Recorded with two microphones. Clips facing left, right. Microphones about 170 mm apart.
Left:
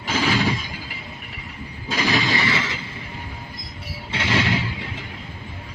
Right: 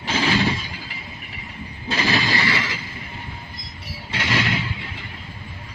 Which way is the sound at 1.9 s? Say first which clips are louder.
Even; 15° left (ahead or behind).